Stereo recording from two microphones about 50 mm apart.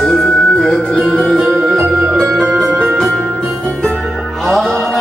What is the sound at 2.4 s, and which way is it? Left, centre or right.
Music, right.